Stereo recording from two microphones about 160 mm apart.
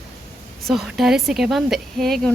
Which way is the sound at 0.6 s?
Centre (ahead or behind).